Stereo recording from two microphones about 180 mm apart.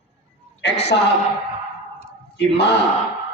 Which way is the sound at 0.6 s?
70° left (ahead or behind).